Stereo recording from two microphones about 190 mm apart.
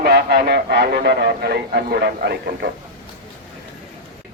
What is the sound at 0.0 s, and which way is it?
A man's voice, 55° right (ahead or behind).